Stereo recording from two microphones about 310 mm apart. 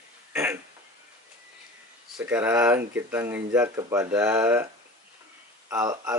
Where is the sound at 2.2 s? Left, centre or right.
Centre.